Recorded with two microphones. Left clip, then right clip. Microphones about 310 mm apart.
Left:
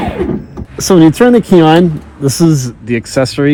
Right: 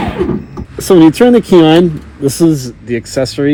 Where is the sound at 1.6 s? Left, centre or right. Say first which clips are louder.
Even; centre.